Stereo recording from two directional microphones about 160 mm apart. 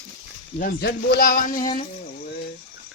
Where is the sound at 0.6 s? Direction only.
75° left (ahead or behind).